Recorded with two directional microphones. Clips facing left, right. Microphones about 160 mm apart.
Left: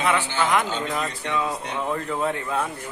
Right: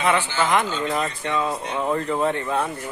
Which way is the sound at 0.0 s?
Centre (ahead or behind).